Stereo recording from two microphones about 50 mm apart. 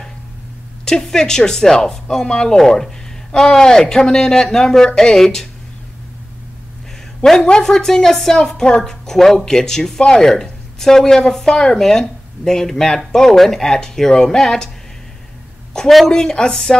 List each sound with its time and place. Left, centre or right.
0.8 s speech: centre
7.6 s speech: centre
15.7 s a sound: centre
16.1 s speech: centre